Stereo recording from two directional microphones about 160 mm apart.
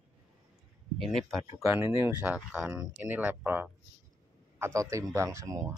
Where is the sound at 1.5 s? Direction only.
20° right (ahead or behind).